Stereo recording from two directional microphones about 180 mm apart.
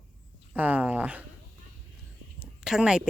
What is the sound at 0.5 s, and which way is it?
Speech, 10° right (ahead or behind).